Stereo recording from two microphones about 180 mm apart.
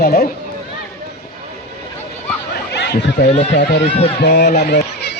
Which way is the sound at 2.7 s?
70° left (ahead or behind).